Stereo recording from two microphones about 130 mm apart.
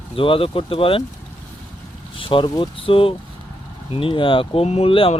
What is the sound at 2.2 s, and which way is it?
Speech, 40° left (ahead or behind).